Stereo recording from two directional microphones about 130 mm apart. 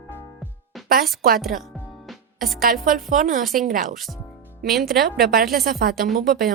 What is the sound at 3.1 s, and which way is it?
Speech, 90° right.